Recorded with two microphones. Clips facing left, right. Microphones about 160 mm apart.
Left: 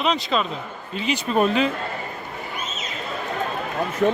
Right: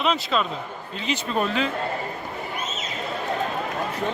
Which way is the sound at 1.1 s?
15° left (ahead or behind).